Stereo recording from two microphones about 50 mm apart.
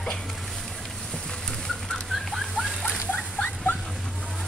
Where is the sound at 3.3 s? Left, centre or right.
Left.